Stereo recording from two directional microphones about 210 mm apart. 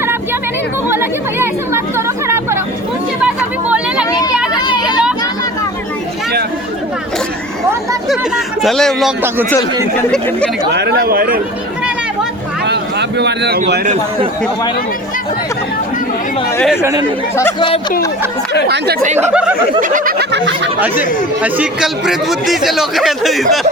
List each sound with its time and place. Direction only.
0.9 s chatter: 10° right (ahead or behind)
3.2 s a sound: 5° right (ahead or behind)
4.6 s a sound: 20° left (ahead or behind)
8.0 s speech: centre (ahead or behind)
10.7 s snicker: 55° right (ahead or behind)
12.6 s a sound: 55° right (ahead or behind)
13.8 s a man's voice: 30° right (ahead or behind)
16.6 s speech: 10° left (ahead or behind)
16.8 s speech: 15° right (ahead or behind)
19.1 s speech: 5° right (ahead or behind)
19.8 s snicker: 40° right (ahead or behind); by 20.6 s 55° right (ahead or behind)
20.7 s speech: 10° right (ahead or behind)